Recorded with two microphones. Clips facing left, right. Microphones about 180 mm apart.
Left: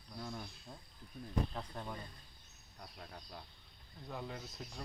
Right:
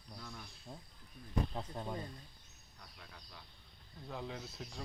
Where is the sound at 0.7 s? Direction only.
10° right (ahead or behind).